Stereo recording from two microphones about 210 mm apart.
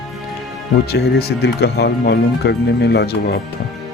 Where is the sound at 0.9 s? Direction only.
50° left (ahead or behind).